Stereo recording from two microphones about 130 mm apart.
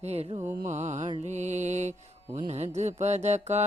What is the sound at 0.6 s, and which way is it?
Mantra, 65° right (ahead or behind).